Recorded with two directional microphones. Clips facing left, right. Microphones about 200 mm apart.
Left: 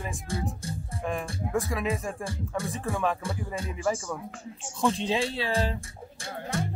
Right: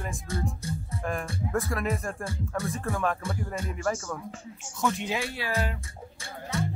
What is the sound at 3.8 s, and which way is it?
Speech, 10° left (ahead or behind).